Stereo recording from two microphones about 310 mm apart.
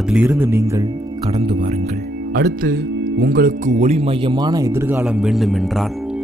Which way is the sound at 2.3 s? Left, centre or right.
Right.